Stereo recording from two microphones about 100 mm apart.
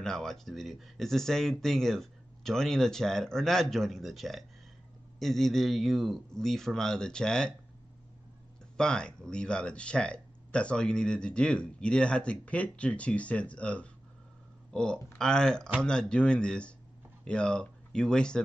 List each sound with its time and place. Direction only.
0.0 s speech: 5° left (ahead or behind)
8.7 s speech: 10° left (ahead or behind)